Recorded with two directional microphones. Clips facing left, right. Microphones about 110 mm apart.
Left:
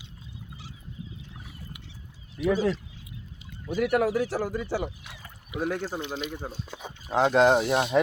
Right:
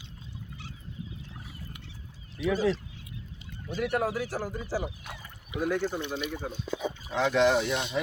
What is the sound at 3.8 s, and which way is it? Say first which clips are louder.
Speech: left 5 dB; 65° left (ahead or behind).